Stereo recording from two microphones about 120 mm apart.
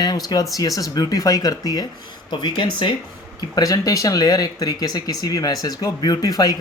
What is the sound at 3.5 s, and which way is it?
Speech, 30° left (ahead or behind).